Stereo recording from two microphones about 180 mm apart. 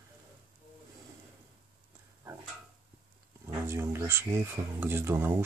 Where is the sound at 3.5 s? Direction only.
15° right (ahead or behind).